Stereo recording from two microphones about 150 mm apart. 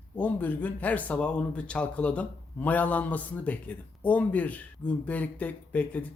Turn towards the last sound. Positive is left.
turn(degrees=10)  # may be behind; listen again after turning